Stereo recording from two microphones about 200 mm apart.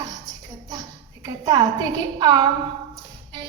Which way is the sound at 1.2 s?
20° right (ahead or behind).